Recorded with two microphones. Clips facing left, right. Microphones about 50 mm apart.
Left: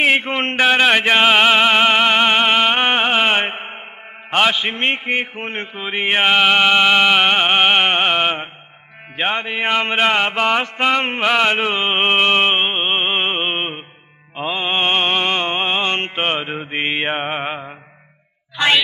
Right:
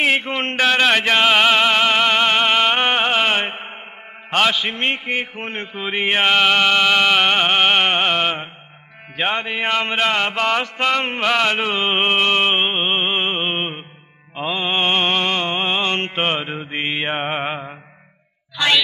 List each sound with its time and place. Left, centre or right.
0.0 s a man's voice: left
0.6 s music: centre
4.3 s a man's voice: centre
5.8 s music: centre
11.1 s mantra: centre
14.3 s music: centre
16.2 s music: centre
17.2 s mantra: centre